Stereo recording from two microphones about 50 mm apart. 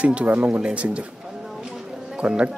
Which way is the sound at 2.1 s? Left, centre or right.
Right.